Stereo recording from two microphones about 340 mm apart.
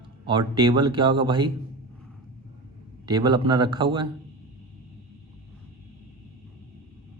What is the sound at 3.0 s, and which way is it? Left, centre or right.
Speech, centre.